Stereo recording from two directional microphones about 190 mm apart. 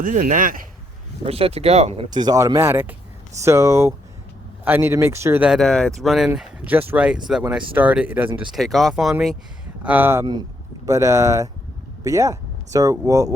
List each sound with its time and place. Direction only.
0.0 s speech: 45° right (ahead or behind)
1.2 s speech: 30° right (ahead or behind)
2.0 s speech: 20° right (ahead or behind)